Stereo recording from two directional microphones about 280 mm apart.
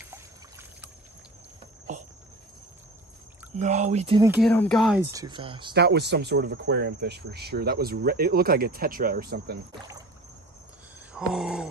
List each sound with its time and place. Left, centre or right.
0.1 s trickle: centre
3.5 s speech: right
4.3 s speech: centre
5.1 s speech: centre
5.7 s speech: right
11.1 s speech: centre